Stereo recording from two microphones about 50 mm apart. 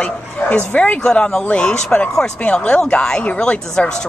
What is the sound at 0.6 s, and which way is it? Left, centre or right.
Speech, left.